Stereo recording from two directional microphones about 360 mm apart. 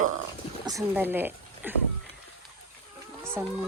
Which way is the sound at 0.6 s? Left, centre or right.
Centre.